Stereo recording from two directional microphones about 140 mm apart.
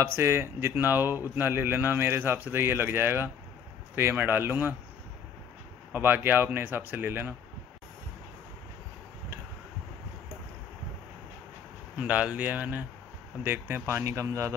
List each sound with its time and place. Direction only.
0.0 s speech: 20° right (ahead or behind)
5.9 s speech: 15° right (ahead or behind)
12.0 s speech: 10° right (ahead or behind)